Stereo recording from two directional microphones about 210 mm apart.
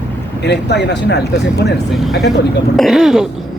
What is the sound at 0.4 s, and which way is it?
Speech, 55° left (ahead or behind).